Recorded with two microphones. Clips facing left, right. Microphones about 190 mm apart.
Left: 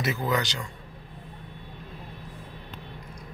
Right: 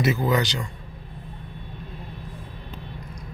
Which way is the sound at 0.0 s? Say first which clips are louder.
Right 6 dB; 25° right (ahead or behind).